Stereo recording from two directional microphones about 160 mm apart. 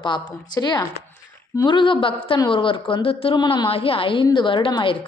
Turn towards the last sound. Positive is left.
turn(degrees=30)  # may be behind; listen again after turning